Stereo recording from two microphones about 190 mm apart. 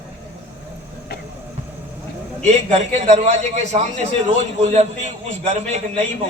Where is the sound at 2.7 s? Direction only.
35° right (ahead or behind).